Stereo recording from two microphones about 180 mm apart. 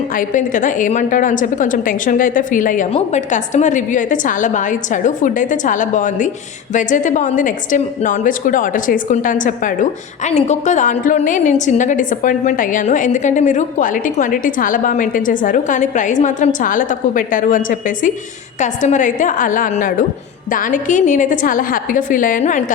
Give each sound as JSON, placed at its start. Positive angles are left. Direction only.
{"t": 0.1, "sound": "a woman's voice", "side_deg": 45}